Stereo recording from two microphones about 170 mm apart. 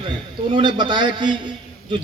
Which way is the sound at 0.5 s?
25° right (ahead or behind).